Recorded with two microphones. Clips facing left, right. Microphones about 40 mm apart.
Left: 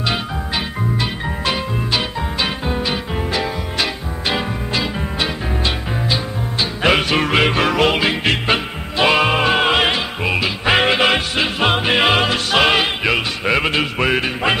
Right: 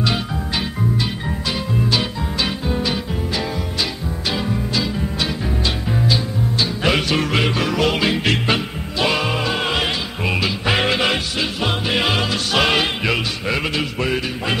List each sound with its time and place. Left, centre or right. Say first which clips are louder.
1.9 s music: even; left
6.6 s music: left 4 dB; left
8.9 s music: left 5 dB; left
10.2 s music: left 1 dB; centre; by 14.5 s left